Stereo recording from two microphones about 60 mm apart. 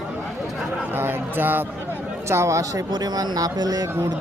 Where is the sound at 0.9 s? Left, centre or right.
Right.